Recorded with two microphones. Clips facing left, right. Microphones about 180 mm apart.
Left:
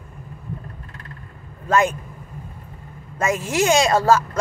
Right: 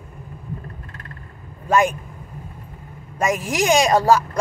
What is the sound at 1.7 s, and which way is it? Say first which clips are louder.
Speech: right 1 dB; 15° right (ahead or behind).